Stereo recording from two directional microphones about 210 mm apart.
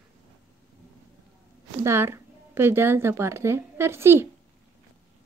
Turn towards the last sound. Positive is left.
turn(degrees=-10)  # may be behind; listen again after turning